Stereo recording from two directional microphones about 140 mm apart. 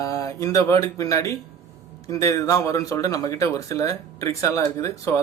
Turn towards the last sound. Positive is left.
turn(degrees=20)  # may be behind; listen again after turning